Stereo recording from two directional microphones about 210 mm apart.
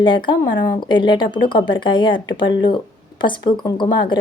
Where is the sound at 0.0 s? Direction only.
20° left (ahead or behind).